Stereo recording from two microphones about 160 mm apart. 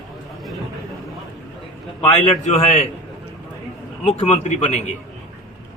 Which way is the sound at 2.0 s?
40° left (ahead or behind).